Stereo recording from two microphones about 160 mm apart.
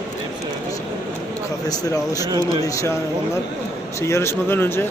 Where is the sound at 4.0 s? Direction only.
15° left (ahead or behind).